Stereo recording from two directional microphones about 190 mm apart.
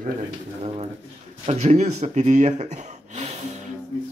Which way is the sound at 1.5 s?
35° right (ahead or behind).